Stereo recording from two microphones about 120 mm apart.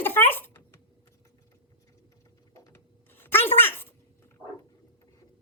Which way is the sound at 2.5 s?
20° left (ahead or behind).